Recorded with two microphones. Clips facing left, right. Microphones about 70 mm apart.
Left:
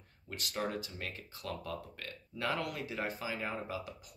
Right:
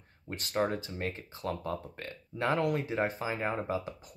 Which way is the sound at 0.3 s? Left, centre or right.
Right.